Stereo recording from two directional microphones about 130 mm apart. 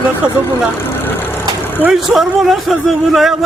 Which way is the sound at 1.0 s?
15° left (ahead or behind).